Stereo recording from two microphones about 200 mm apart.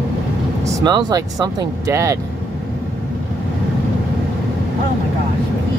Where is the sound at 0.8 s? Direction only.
20° right (ahead or behind).